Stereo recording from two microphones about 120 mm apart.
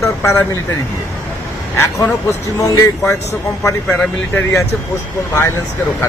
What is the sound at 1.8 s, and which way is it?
Speech, 20° left (ahead or behind).